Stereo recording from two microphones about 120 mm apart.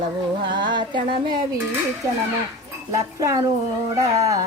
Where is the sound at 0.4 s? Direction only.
40° right (ahead or behind).